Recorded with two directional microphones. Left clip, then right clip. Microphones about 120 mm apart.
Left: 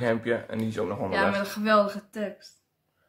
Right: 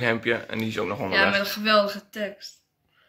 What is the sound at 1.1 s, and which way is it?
Speech, 45° left (ahead or behind).